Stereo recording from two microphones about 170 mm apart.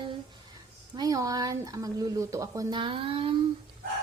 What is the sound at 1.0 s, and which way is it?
Speech, 20° right (ahead or behind).